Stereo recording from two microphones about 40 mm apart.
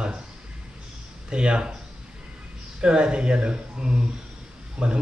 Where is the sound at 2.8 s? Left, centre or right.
Right.